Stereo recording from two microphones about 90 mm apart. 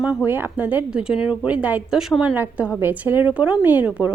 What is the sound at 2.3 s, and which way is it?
A woman's voice, 20° right (ahead or behind).